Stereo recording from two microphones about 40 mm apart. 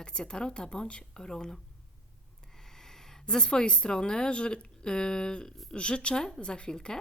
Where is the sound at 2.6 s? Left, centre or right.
Centre.